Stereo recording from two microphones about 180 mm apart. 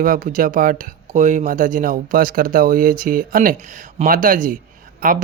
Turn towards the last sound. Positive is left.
turn(degrees=-50)  # may be behind; listen again after turning